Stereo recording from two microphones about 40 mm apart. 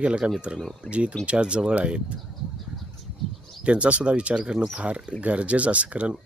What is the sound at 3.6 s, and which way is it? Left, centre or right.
Speech, right.